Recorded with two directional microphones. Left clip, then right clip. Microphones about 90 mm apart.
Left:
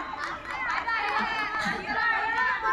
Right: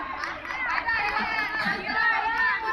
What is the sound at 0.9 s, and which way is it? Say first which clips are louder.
Music: right 1 dB; 5° right (ahead or behind).